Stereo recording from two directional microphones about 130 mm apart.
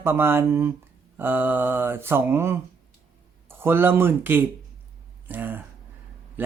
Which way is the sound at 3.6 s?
15° right (ahead or behind).